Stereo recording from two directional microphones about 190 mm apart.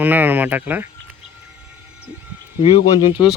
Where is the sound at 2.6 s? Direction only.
30° left (ahead or behind).